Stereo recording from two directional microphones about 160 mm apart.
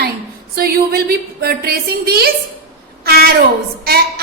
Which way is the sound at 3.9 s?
75° right (ahead or behind).